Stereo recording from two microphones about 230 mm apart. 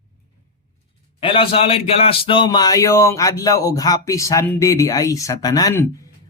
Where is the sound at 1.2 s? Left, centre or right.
Left.